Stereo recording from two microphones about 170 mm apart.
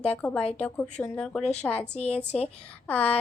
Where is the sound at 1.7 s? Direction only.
35° left (ahead or behind).